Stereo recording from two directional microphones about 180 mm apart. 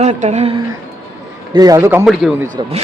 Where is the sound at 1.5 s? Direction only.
20° right (ahead or behind).